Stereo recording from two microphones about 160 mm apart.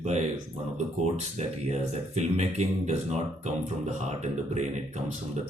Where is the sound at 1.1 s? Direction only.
45° right (ahead or behind).